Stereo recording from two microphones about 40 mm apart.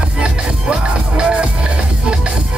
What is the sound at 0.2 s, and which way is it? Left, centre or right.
Music, right.